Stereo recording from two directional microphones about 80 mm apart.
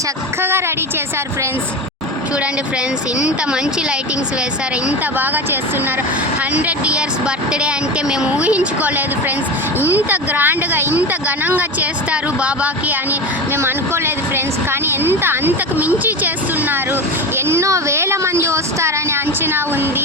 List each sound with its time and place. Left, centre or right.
3.2 s speech: centre
4.9 s speech: right
13.6 s a woman's voice: right